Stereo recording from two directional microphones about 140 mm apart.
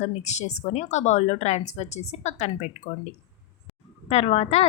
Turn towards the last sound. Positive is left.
turn(degrees=50)  # may be behind; listen again after turning